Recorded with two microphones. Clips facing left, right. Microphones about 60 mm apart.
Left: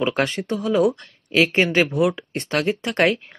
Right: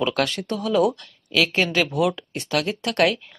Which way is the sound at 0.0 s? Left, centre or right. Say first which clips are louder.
Left 1 dB; left.